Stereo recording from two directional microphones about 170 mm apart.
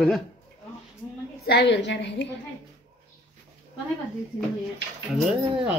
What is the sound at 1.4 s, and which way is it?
Speech, 80° left.